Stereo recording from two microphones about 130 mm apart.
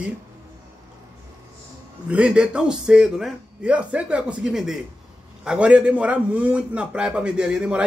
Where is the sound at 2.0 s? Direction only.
10° right (ahead or behind).